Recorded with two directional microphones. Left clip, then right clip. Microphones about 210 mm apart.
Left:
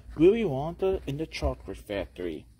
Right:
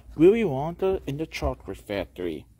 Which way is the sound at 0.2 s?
15° right (ahead or behind).